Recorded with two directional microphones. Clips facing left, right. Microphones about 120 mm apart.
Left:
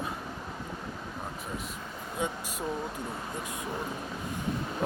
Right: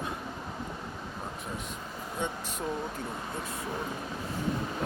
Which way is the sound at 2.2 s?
5° left (ahead or behind).